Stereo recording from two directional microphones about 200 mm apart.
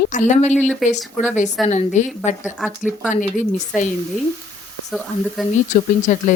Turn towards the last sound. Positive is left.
turn(degrees=35)  # may be behind; listen again after turning